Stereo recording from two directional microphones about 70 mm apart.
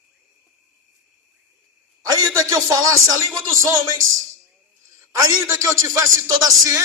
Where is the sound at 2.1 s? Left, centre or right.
Right.